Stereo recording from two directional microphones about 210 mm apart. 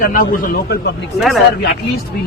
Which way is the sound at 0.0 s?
40° left (ahead or behind).